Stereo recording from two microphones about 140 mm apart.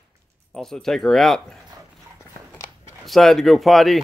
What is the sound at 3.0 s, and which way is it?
Speech, centre (ahead or behind).